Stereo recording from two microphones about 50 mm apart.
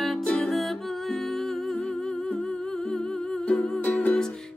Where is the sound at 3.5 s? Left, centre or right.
Left.